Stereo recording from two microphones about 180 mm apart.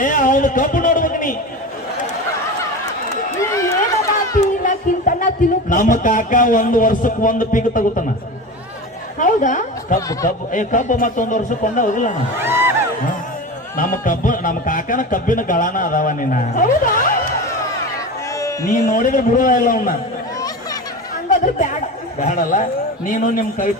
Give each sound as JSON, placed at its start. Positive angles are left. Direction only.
{"t": 0.0, "sound": "a sound", "side_deg": 45}
{"t": 3.4, "sound": "run", "side_deg": 15}
{"t": 4.6, "sound": "speech", "side_deg": 45}
{"t": 9.1, "sound": "a woman's voice", "side_deg": 45}
{"t": 12.4, "sound": "a sound", "side_deg": -10}
{"t": 13.7, "sound": "a man's voice", "side_deg": 50}
{"t": 18.7, "sound": "a man's voice", "side_deg": 45}
{"t": 21.2, "sound": "a man's voice", "side_deg": 45}